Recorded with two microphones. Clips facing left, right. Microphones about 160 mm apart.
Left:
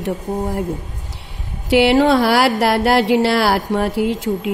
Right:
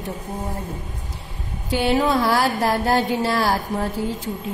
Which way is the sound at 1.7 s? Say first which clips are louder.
Left 7 dB; 85° left.